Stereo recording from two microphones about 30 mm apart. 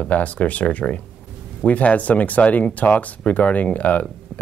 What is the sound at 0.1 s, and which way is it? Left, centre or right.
Speech, left.